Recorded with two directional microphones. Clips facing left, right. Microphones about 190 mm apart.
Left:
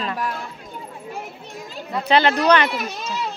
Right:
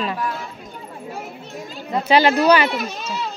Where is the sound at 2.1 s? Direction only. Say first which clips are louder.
Right 2 dB; 10° right (ahead or behind).